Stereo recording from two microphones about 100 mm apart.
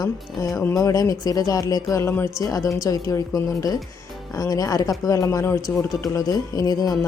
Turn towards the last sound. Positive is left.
turn(degrees=40)  # may be behind; listen again after turning